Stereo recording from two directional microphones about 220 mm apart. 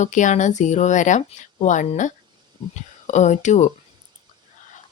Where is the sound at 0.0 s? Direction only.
35° left (ahead or behind).